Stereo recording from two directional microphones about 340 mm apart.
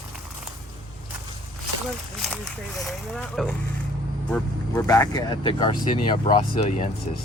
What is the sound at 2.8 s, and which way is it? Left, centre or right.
Speech, centre.